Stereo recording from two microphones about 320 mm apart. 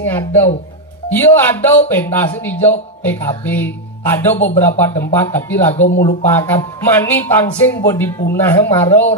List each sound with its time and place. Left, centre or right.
0.0 s a sound: centre
1.1 s a man's voice: centre
5.8 s speech: left
6.2 s a man's voice: centre